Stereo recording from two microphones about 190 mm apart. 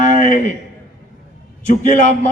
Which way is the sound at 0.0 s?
40° left (ahead or behind).